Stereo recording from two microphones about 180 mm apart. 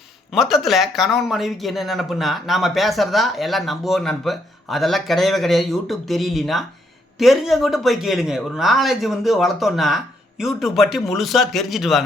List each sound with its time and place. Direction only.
0.3 s speech: centre (ahead or behind)